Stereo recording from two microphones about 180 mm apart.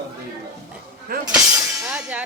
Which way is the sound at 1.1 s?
55° right (ahead or behind).